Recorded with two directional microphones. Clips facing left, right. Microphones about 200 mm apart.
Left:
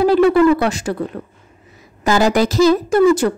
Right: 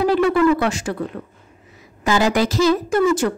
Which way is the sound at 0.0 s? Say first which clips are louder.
Left 4 dB; 35° left (ahead or behind).